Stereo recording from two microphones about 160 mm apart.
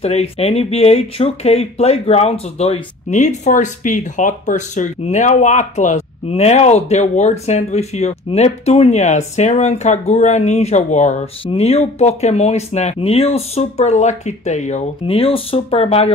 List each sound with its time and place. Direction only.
0.0 s speech: 40° left (ahead or behind)